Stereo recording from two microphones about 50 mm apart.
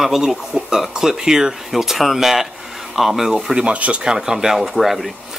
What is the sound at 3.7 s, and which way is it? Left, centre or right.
Speech, right.